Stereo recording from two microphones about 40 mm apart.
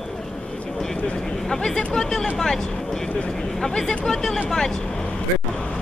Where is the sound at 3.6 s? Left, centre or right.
Centre.